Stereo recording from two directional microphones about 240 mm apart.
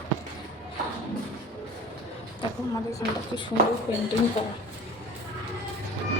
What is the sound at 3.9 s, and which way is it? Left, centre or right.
Speech, centre.